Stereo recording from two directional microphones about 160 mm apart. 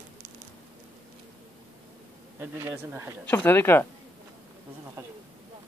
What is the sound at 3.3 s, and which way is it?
Speech, 10° left (ahead or behind).